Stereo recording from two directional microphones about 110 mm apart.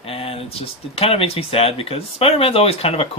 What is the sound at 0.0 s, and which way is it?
Speech, 60° left (ahead or behind).